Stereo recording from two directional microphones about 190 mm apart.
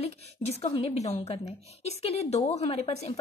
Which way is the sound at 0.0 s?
30° left (ahead or behind).